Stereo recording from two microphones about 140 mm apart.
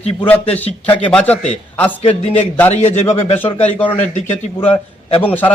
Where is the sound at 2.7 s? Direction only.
55° left (ahead or behind).